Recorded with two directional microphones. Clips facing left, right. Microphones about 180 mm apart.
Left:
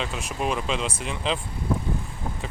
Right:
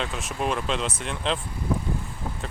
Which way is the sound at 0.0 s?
Centre (ahead or behind).